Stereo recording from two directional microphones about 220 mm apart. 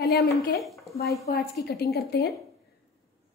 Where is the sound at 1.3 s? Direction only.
45° left (ahead or behind).